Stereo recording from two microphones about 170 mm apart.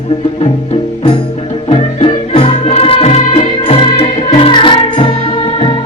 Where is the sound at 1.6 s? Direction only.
35° left (ahead or behind).